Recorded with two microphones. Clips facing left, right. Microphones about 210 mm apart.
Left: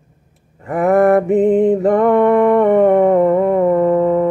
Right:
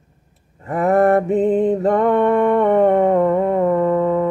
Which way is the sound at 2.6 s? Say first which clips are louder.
Left 3 dB; 15° left (ahead or behind).